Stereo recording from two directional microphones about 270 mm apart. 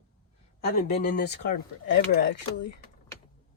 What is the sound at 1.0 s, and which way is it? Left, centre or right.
Speech, left.